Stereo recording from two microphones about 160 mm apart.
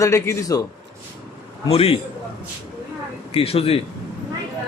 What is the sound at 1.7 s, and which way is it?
Speech, 40° left (ahead or behind).